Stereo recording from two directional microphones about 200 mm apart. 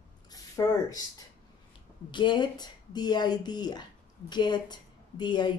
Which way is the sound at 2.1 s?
25° left (ahead or behind).